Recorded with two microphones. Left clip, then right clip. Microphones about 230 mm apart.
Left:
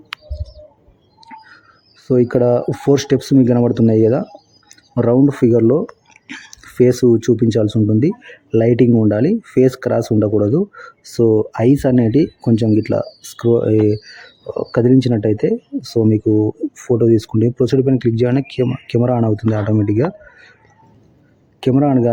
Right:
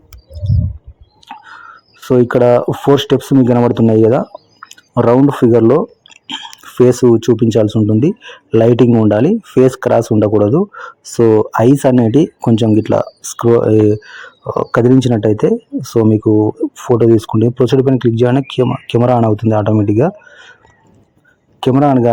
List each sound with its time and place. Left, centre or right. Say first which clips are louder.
1.3 s whispering: right 6 dB; centre
2.0 s speech: right 4 dB; centre
6.2 s chewing: right 9 dB; centre
6.7 s speech: right 3 dB; centre
11.2 s speech: right 4 dB; centre
14.0 s speech: right 6 dB; centre
15.4 s speech: right 4 dB; right
16.0 s speech: right 4 dB; centre
16.3 s speech: right 4 dB; centre
17.2 s speech: right 4 dB; centre
21.8 s speech: right 4 dB; centre